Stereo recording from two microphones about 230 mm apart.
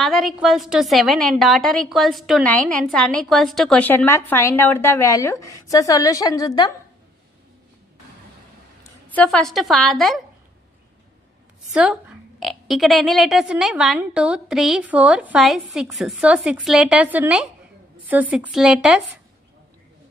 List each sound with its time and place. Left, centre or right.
0.0 s a woman's voice: centre
9.1 s a woman's voice: centre
11.7 s a woman's voice: centre